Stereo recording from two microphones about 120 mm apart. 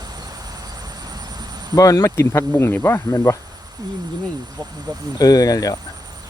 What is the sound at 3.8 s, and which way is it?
Speech, 30° right (ahead or behind).